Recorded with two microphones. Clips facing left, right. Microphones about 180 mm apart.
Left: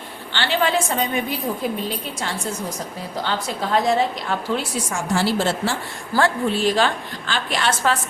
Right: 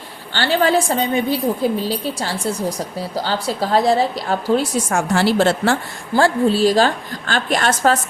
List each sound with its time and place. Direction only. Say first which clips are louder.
0.3 s a woman's voice: right 4 dB; 40° right (ahead or behind)
4.9 s a woman's voice: right 3 dB; 65° right (ahead or behind)
6.1 s a woman's voice: right 5 dB; 30° right (ahead or behind)